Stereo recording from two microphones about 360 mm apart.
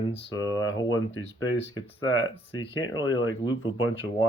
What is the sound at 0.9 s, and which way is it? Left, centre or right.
Speech, left.